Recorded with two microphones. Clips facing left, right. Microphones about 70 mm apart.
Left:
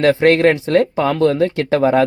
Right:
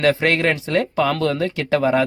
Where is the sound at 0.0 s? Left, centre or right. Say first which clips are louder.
Left 6 dB; left.